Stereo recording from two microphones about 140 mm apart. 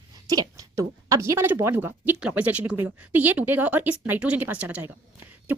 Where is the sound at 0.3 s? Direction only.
25° right (ahead or behind).